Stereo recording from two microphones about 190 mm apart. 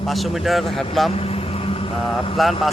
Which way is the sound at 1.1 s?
30° left (ahead or behind).